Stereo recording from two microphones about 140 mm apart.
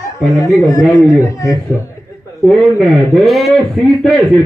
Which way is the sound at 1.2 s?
25° left (ahead or behind).